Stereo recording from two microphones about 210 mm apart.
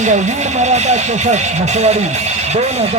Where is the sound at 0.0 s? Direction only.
35° right (ahead or behind).